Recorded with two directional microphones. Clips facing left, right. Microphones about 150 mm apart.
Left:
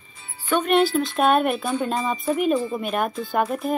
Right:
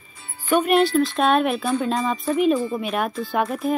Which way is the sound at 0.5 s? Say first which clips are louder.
Right 2 dB; 5° right (ahead or behind).